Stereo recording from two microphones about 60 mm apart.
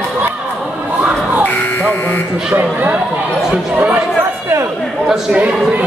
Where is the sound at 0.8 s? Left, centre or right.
Right.